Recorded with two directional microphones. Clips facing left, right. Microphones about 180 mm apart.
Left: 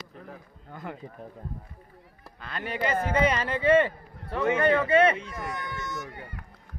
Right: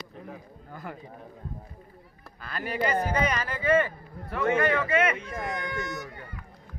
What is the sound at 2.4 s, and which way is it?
Speech, 25° left (ahead or behind).